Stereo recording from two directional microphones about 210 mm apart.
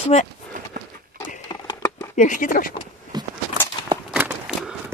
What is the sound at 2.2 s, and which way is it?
Speech, 40° left (ahead or behind).